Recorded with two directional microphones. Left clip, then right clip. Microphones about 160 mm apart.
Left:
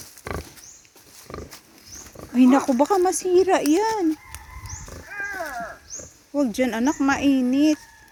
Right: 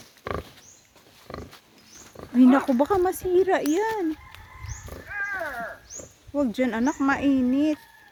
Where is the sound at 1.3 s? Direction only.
20° left (ahead or behind).